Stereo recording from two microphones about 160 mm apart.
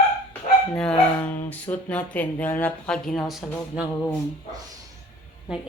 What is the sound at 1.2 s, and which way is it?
Speech, 10° left (ahead or behind).